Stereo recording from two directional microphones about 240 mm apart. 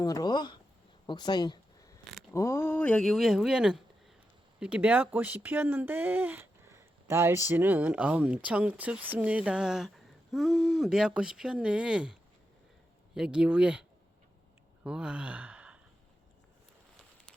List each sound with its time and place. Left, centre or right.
0.0 s speech: centre
1.0 s a sound: centre
2.3 s speech: centre
13.1 s speech: centre
14.8 s speech: centre